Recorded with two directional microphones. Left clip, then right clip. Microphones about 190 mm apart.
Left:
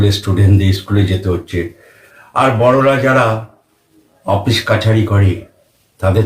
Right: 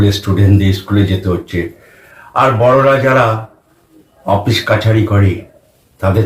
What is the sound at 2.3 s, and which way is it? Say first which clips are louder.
Speech: right 2 dB; 15° left (ahead or behind).